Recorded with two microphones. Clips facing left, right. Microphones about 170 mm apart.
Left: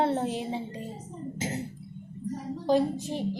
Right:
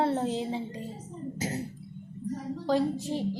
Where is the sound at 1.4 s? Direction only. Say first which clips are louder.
Even; 25° left (ahead or behind).